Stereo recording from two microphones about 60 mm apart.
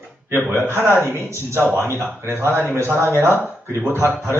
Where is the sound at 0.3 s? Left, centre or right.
Right.